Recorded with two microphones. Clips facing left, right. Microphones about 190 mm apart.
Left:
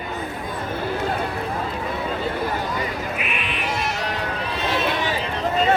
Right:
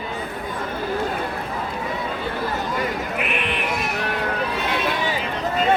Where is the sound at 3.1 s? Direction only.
60° right (ahead or behind).